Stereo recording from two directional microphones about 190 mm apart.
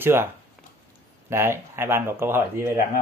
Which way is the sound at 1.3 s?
15° right (ahead or behind).